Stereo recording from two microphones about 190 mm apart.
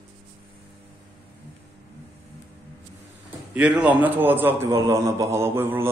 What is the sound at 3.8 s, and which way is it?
A man's voice, 10° right (ahead or behind).